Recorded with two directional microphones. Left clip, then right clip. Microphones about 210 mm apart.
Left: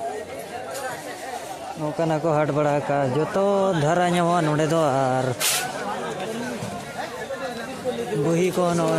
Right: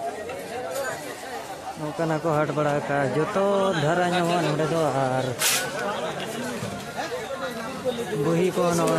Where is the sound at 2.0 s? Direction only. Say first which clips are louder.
Left 2 dB; 20° left (ahead or behind).